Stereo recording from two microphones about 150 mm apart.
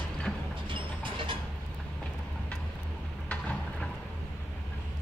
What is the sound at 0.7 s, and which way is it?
Vehicle, 35° right (ahead or behind).